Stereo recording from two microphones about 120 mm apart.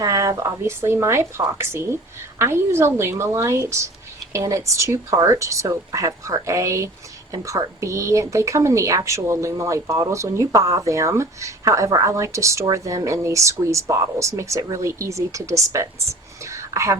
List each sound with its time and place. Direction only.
0.0 s speech: 30° right (ahead or behind)